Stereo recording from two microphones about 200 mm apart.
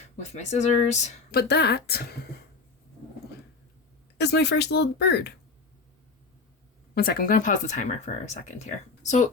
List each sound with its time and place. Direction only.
0.0 s speech: 35° left (ahead or behind)
1.3 s speech: 50° left (ahead or behind)
4.2 s speech: 55° left (ahead or behind)
6.9 s speech: 50° left (ahead or behind)